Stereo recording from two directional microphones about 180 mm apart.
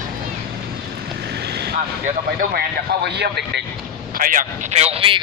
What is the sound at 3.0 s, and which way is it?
Speech, 65° right (ahead or behind).